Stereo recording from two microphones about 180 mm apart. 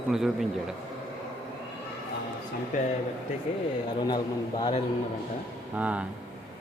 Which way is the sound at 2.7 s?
45° left (ahead or behind).